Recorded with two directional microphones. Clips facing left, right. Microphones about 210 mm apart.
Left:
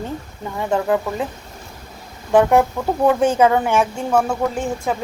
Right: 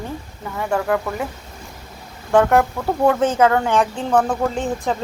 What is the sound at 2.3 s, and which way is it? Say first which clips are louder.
A woman's voice: left 1 dB; 15° left (ahead or behind).